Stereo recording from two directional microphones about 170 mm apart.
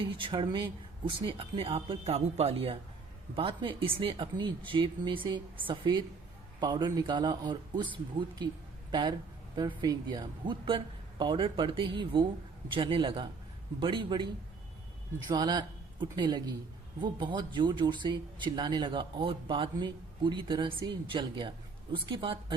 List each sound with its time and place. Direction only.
0.0 s speech: 30° right (ahead or behind)
8.9 s speech: 25° right (ahead or behind)
15.3 s speech: 25° right (ahead or behind)